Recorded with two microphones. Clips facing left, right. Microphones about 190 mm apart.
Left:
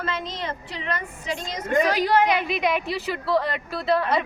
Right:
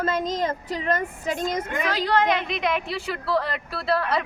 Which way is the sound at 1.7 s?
35° left (ahead or behind).